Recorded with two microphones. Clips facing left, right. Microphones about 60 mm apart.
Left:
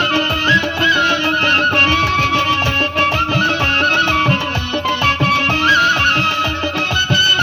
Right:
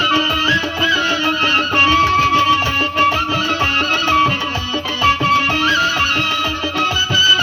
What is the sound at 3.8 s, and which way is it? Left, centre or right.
Music, left.